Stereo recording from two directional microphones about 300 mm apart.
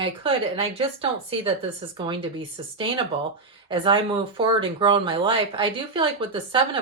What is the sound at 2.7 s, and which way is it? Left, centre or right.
Speech, centre.